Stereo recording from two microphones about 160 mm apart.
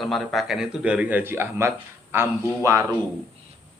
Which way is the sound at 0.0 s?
Centre (ahead or behind).